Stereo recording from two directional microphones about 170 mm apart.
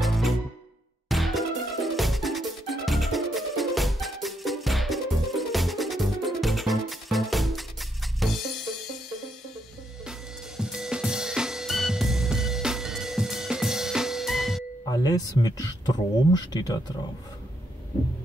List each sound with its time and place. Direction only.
0.0 s music: centre (ahead or behind)
10.6 s music: 5° right (ahead or behind)
14.9 s a sound: 20° left (ahead or behind)
16.3 s speech: 25° left (ahead or behind)